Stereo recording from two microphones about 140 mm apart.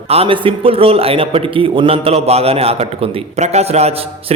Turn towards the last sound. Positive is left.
turn(degrees=-50)  # may be behind; listen again after turning